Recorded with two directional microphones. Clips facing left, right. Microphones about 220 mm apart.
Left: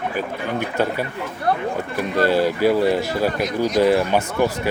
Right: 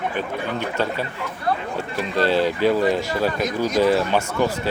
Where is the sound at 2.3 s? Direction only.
10° left (ahead or behind).